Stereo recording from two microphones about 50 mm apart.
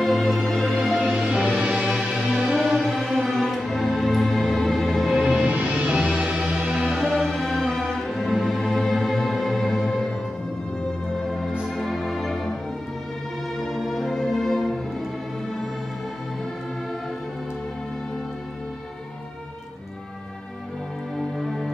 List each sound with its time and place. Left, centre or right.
0.0 s music: centre
0.9 s music: centre
3.0 s music: centre
5.2 s music: right
7.2 s music: centre
11.2 s music: centre
13.6 s music: centre
21.4 s music: centre